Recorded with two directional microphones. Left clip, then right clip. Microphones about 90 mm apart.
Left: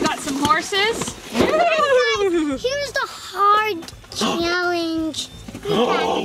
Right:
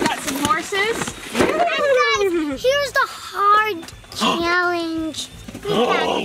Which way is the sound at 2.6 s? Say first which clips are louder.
Right 5 dB; 5° right (ahead or behind).